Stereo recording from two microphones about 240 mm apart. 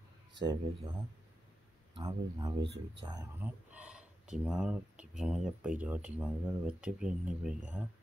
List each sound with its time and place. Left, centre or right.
0.3 s speech: centre
2.0 s speech: centre
2.6 s speech: right
3.0 s speech: centre